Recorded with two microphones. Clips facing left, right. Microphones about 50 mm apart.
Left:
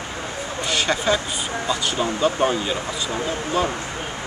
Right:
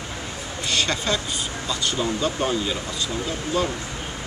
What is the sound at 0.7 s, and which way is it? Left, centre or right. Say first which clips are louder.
Speech: left 3 dB; centre.